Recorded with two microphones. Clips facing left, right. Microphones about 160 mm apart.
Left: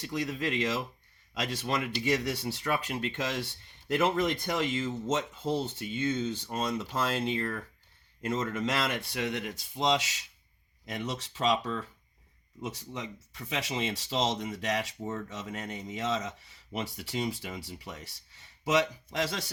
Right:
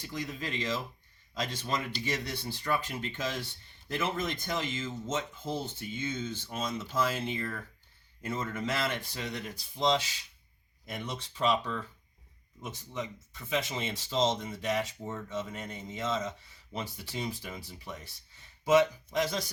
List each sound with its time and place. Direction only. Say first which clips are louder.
0.0 s speech: left 5 dB; 85° left
12.6 s speech: even; 75° left (ahead or behind)